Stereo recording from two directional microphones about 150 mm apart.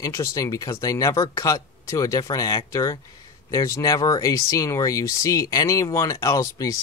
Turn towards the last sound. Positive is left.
turn(degrees=20)  # may be behind; listen again after turning